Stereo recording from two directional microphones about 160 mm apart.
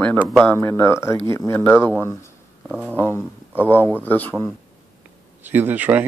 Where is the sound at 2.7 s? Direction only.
10° right (ahead or behind).